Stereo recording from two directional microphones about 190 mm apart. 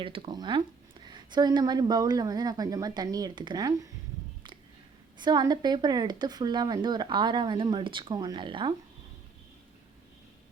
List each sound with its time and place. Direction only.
0.0 s a woman's voice: 25° right (ahead or behind)
5.1 s a woman's voice: 25° right (ahead or behind)